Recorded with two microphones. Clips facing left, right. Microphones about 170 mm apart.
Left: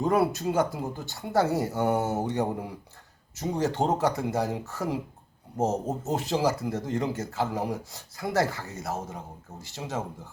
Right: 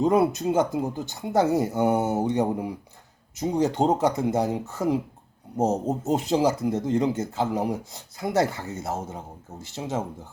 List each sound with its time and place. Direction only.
0.0 s speech: 20° right (ahead or behind)